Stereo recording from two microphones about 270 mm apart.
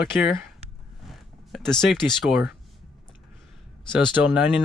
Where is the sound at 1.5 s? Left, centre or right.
Centre.